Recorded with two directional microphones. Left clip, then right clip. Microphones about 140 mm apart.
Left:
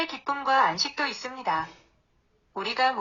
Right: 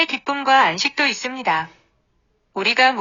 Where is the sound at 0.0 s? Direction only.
35° right (ahead or behind).